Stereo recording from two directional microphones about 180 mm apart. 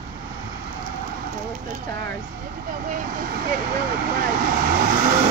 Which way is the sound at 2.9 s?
50° right (ahead or behind).